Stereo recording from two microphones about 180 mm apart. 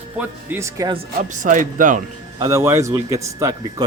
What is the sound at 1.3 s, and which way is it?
Speech, 45° right (ahead or behind).